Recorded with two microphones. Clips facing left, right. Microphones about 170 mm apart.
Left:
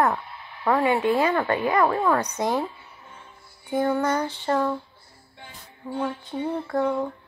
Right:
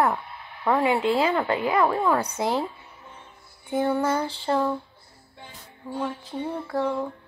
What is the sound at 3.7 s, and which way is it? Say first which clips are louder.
Speech: even; 10° right (ahead or behind).